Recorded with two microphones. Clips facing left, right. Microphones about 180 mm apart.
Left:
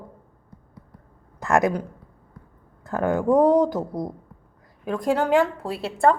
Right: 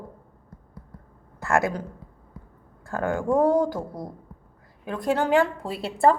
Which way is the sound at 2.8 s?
20° left (ahead or behind).